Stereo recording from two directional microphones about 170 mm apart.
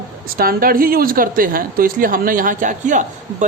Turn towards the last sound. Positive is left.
turn(degrees=-50)  # may be behind; listen again after turning